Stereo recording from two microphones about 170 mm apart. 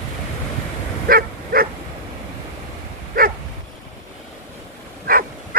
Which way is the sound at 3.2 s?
60° right (ahead or behind).